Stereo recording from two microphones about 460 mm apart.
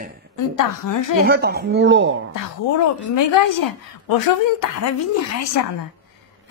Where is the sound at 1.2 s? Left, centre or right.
Right.